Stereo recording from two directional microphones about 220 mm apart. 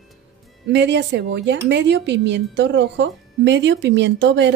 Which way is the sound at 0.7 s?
55° right (ahead or behind).